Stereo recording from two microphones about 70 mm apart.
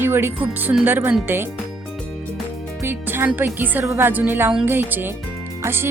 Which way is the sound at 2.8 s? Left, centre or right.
Right.